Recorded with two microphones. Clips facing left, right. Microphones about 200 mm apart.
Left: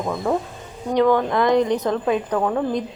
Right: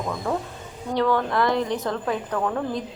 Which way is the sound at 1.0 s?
15° left (ahead or behind).